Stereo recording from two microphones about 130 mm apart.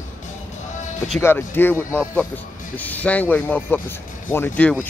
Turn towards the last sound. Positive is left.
turn(degrees=10)  # may be behind; listen again after turning